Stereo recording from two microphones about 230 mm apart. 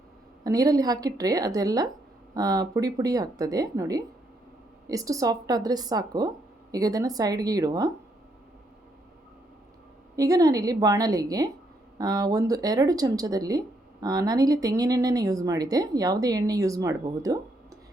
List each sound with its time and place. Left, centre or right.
0.4 s speech: centre
10.2 s speech: centre